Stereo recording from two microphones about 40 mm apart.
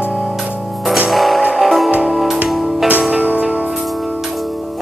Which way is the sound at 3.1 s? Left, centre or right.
Right.